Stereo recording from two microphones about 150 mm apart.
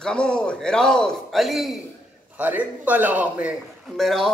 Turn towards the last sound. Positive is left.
turn(degrees=0)  # may be behind; listen again after turning